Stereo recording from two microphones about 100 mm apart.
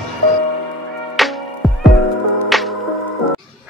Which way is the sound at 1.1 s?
Centre (ahead or behind).